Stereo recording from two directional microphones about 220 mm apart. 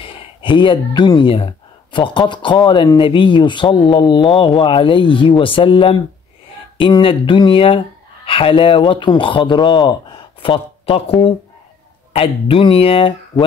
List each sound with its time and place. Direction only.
0.0 s speech: 20° left (ahead or behind)